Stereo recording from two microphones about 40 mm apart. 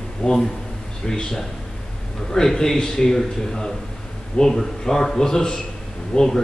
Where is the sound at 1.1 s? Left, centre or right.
Centre.